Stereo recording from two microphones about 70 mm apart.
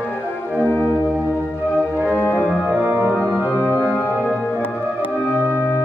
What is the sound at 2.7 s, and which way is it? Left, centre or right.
Organ, right.